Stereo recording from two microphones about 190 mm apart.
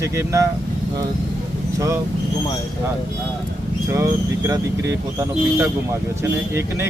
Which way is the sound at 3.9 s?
15° right (ahead or behind).